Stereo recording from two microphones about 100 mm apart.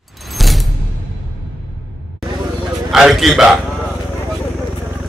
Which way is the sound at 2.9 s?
Centre (ahead or behind).